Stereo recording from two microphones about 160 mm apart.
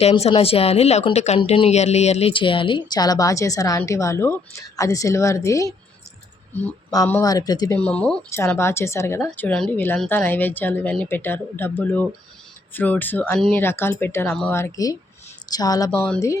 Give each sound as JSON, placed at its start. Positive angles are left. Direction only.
{"t": 0.0, "sound": "speech", "side_deg": 40}
{"t": 6.5, "sound": "a sound", "side_deg": 10}
{"t": 7.2, "sound": "speech", "side_deg": 20}
{"t": 7.8, "sound": "speech", "side_deg": 10}
{"t": 15.9, "sound": "speech", "side_deg": 10}